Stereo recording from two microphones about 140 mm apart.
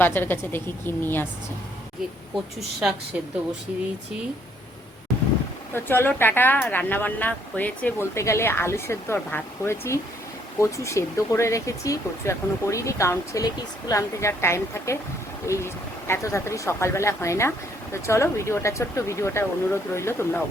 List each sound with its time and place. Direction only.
0.0 s speech: 15° left (ahead or behind)
2.3 s a woman's voice: centre (ahead or behind)
5.7 s speech: 15° left (ahead or behind)